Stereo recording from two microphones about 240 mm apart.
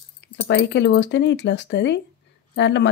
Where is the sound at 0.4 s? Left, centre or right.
Left.